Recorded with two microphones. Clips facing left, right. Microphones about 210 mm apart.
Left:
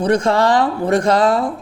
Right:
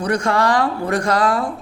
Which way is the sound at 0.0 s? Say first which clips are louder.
Left 4 dB; 25° left (ahead or behind).